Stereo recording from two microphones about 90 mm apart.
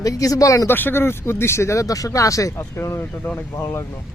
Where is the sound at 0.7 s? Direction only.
25° left (ahead or behind).